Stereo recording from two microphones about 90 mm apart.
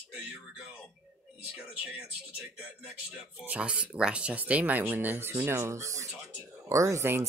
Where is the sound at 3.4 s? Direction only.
15° right (ahead or behind).